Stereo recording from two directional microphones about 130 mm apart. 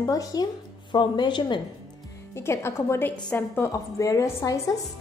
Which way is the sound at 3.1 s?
10° left (ahead or behind).